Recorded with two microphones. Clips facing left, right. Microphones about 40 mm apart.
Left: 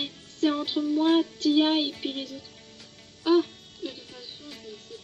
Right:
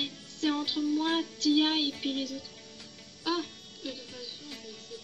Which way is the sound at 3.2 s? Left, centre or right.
Centre.